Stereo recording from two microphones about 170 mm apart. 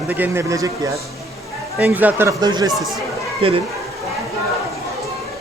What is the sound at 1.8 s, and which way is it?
Speech, 10° right (ahead or behind).